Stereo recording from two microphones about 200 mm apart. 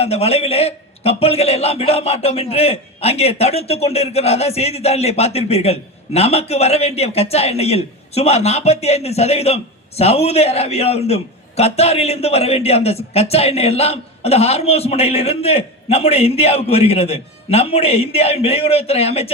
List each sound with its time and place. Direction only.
0.0 s a man's voice: 30° left (ahead or behind)